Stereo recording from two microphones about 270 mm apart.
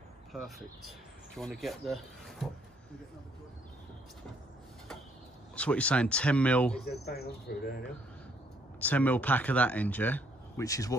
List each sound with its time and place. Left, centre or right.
0.3 s speech: centre
5.6 s speech: centre
6.9 s speech: left
8.7 s speech: centre